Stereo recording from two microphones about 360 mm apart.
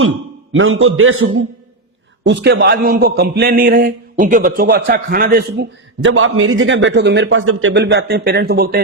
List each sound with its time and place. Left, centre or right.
0.0 s a man's voice: right